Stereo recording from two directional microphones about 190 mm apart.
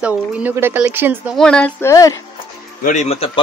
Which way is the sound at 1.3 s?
5° left (ahead or behind).